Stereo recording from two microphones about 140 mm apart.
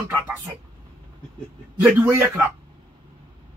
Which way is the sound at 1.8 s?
15° right (ahead or behind).